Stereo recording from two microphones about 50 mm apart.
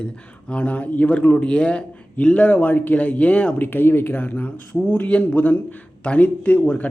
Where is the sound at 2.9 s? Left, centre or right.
Left.